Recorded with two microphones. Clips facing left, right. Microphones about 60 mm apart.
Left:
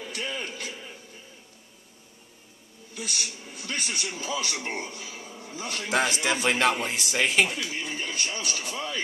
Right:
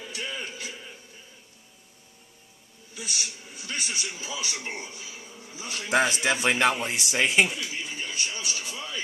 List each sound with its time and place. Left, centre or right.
0.4 s music: left
2.9 s a man's voice: left
5.9 s a man's voice: centre
7.6 s speech: left